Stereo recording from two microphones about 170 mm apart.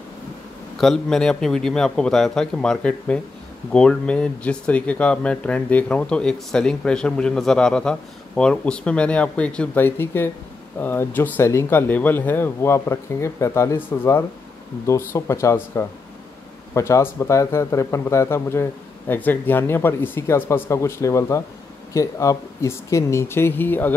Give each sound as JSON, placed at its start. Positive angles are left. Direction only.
{"t": 0.7, "sound": "a man's voice", "side_deg": 5}